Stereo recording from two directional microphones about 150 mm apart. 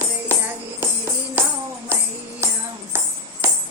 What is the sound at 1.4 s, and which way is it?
Music, 10° right (ahead or behind).